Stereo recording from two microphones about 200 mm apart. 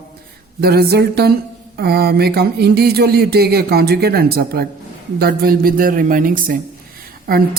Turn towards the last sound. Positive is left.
turn(degrees=-50)  # may be behind; listen again after turning